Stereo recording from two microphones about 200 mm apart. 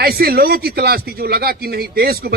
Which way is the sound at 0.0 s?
50° right (ahead or behind).